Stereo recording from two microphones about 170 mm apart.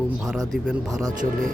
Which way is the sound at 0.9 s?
20° right (ahead or behind).